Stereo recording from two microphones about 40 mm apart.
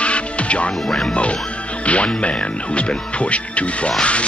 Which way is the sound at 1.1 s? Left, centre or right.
Left.